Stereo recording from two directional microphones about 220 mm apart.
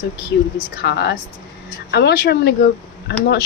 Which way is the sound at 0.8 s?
50° left (ahead or behind).